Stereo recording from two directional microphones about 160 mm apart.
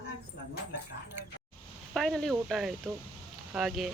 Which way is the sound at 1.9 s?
Centre (ahead or behind).